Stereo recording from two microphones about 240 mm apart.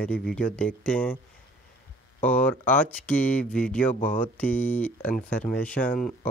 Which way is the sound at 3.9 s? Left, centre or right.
Left.